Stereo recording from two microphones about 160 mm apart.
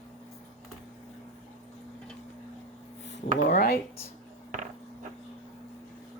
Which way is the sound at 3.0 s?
90° left.